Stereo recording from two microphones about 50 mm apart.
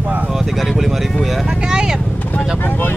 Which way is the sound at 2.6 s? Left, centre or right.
Left.